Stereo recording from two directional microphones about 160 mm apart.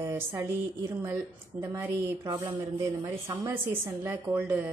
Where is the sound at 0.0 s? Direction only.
15° right (ahead or behind).